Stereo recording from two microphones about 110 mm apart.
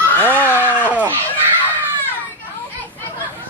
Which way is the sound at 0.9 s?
15° right (ahead or behind).